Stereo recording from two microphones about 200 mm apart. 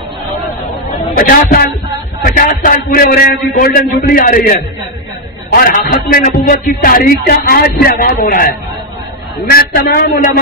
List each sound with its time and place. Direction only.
1.1 s a man's voice: 45° left (ahead or behind)
9.5 s a man's voice: 50° left (ahead or behind)